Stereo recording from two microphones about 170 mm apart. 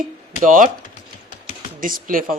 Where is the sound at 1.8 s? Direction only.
55° right (ahead or behind).